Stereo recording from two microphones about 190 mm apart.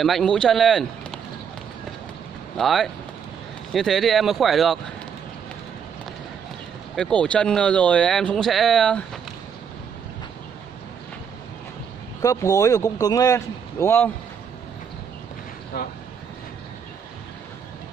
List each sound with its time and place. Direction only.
0.0 s speech: centre (ahead or behind)
2.5 s speech: centre (ahead or behind)
7.0 s speech: 5° left (ahead or behind)
12.2 s a man's voice: 15° left (ahead or behind)